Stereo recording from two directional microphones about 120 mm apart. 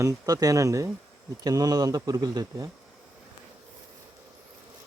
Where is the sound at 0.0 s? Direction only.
30° right (ahead or behind).